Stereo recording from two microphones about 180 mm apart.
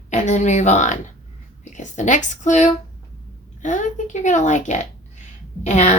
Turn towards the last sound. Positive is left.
turn(degrees=40)  # may be behind; listen again after turning